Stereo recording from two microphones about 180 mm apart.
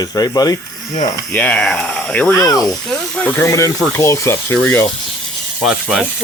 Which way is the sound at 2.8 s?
5° left (ahead or behind).